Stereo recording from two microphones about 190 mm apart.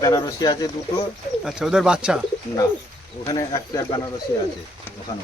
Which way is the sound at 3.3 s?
15° left (ahead or behind).